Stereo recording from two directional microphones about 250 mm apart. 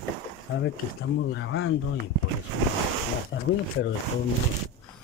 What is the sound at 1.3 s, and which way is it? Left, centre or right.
Speech, left.